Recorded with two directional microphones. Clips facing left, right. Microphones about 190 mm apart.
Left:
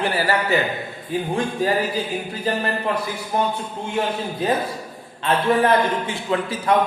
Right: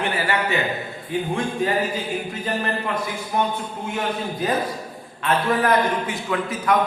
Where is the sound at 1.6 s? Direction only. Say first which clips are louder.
Left 2 dB; 35° left (ahead or behind).